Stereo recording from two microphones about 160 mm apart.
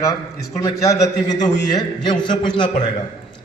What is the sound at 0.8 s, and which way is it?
A man's voice, 20° left (ahead or behind).